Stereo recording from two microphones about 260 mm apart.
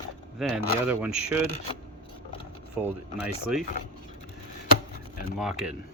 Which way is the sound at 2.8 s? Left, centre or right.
Centre.